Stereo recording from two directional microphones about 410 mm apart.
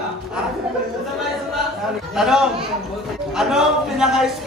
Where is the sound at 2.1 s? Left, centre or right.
Centre.